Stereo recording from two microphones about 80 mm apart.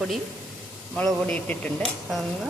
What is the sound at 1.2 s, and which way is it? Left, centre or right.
Speech, centre.